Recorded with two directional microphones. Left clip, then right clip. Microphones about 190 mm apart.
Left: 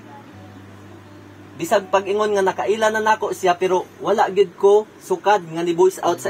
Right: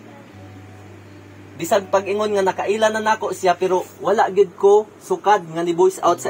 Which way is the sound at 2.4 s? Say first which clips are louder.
Even; 20° right (ahead or behind).